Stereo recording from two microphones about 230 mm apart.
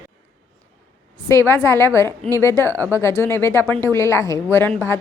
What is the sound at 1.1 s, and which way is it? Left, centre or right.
A woman's voice, centre.